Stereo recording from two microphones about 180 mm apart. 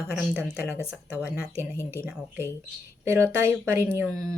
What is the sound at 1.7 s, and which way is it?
Speech, 15° left (ahead or behind).